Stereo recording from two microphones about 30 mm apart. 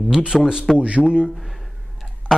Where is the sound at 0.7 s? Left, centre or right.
Right.